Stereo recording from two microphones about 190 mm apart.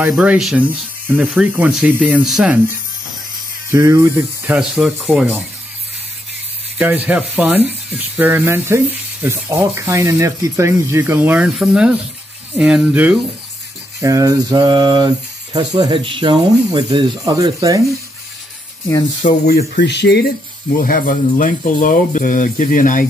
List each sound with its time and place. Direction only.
0.0 s speech: 5° right (ahead or behind)
3.7 s speech: 15° right (ahead or behind)
6.8 s speech: 5° right (ahead or behind)
13.9 s speech: 15° right (ahead or behind)
18.9 s speech: 20° left (ahead or behind)
19.5 s speech: 55° left (ahead or behind)
20.7 s speech: 50° left (ahead or behind)